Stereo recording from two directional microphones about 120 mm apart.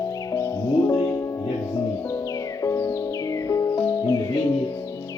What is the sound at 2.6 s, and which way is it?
Music, 20° left (ahead or behind).